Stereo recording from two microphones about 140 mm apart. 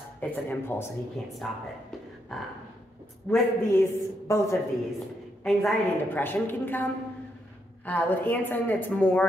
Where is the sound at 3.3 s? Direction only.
15° left (ahead or behind).